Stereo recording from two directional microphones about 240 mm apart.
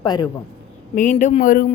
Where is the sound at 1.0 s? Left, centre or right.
Left.